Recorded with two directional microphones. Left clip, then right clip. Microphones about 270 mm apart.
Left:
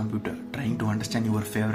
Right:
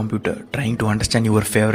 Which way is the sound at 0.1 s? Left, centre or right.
Right.